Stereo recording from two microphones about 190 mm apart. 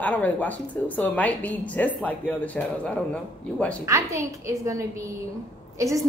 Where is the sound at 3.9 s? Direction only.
15° right (ahead or behind).